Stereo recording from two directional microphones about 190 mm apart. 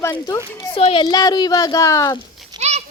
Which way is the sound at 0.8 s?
30° left (ahead or behind).